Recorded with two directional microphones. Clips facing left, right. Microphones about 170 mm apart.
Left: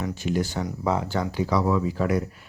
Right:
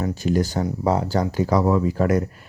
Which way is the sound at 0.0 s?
40° right (ahead or behind).